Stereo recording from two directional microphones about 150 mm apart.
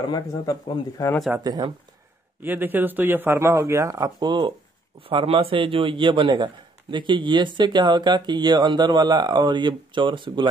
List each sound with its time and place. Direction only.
0.1 s speech: 25° left (ahead or behind)
1.4 s speech: 25° right (ahead or behind)
2.4 s a man's voice: 15° right (ahead or behind); by 10.5 s 35° right (ahead or behind)